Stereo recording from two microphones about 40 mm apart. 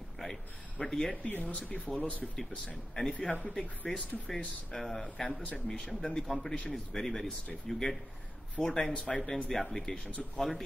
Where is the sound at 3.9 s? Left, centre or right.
Centre.